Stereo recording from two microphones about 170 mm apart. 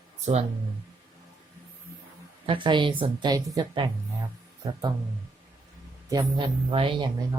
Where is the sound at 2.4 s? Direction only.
30° right (ahead or behind).